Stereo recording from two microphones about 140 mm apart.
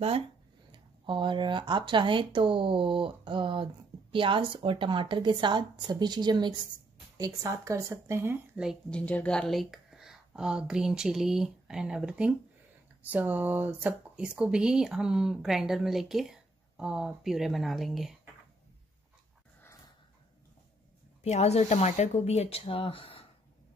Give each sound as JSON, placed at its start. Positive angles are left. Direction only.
{"t": 0.7, "sound": "speech", "side_deg": -35}
{"t": 8.9, "sound": "speech", "side_deg": 10}
{"t": 21.2, "sound": "speech", "side_deg": 50}